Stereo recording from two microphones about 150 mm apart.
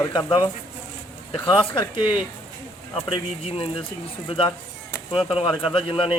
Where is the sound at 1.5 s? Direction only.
35° left (ahead or behind).